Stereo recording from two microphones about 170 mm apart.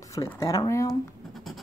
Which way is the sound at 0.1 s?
20° left (ahead or behind).